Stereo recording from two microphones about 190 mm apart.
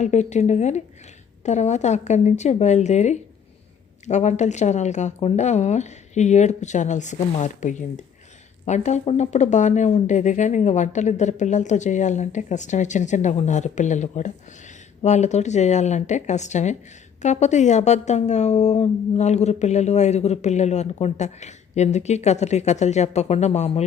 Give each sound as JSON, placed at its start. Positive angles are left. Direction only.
{"t": 0.0, "sound": "speech", "side_deg": 40}